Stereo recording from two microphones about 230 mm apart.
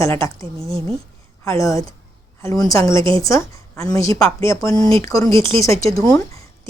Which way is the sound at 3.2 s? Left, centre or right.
Centre.